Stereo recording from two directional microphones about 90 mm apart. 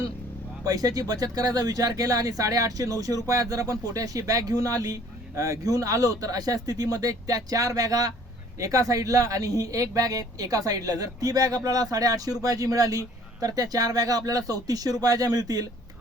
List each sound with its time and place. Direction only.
0.6 s speech: 45° right (ahead or behind)